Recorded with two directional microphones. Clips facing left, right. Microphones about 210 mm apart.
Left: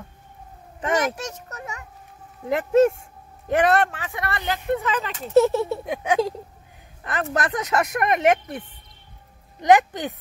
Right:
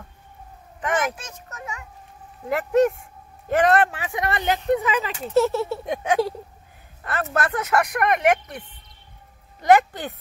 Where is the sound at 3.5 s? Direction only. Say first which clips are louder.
Even; 15° left (ahead or behind).